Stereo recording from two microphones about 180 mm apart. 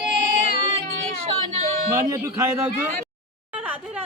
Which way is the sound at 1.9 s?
15° right (ahead or behind).